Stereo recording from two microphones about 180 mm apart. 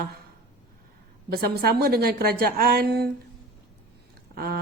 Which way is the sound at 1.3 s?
60° right (ahead or behind).